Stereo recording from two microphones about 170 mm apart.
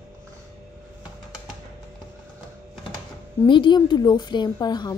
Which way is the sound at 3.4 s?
30° left (ahead or behind).